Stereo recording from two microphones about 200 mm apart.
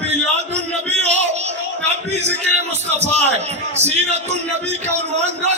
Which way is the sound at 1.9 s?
35° right (ahead or behind).